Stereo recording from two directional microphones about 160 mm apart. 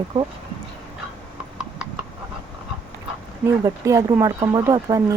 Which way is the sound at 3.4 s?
20° right (ahead or behind).